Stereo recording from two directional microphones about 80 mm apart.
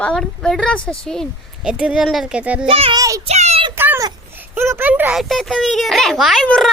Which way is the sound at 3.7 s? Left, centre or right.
Right.